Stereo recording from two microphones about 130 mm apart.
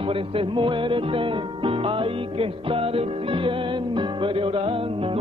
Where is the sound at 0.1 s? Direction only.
40° right (ahead or behind).